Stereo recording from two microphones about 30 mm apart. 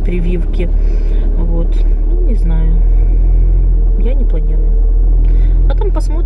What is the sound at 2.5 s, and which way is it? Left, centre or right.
Speech, centre.